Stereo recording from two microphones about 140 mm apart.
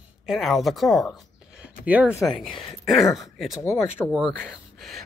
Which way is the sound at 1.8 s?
10° right (ahead or behind).